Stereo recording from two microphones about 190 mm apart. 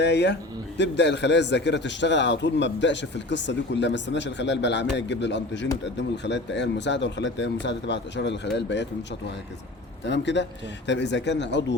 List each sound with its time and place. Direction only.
0.0 s a man's voice: 60° left (ahead or behind)
10.1 s a man's voice: 70° left (ahead or behind)